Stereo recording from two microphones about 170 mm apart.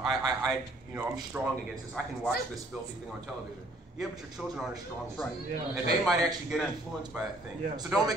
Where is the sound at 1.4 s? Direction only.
10° right (ahead or behind).